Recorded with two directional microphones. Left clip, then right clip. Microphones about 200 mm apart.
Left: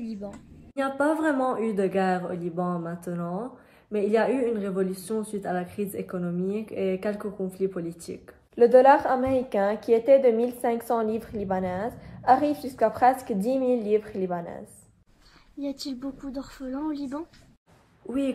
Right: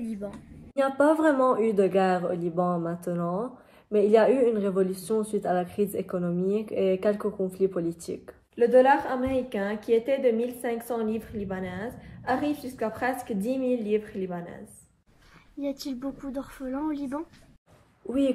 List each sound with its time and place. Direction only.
0.0 s a sound: centre (ahead or behind)
0.7 s speech: centre (ahead or behind)
8.5 s a woman's voice: 20° left (ahead or behind)
15.6 s speech: 5° right (ahead or behind)